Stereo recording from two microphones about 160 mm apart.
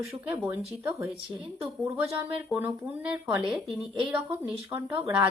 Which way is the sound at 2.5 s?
10° right (ahead or behind).